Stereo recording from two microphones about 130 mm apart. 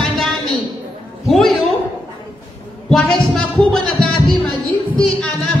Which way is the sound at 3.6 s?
45° right (ahead or behind).